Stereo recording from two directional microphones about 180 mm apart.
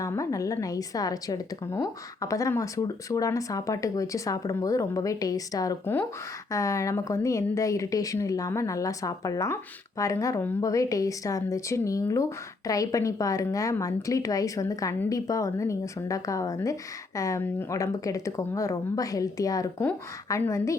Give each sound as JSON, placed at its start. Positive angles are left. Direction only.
{"t": 0.0, "sound": "a woman's voice", "side_deg": 15}